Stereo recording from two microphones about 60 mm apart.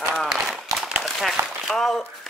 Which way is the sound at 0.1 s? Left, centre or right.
Centre.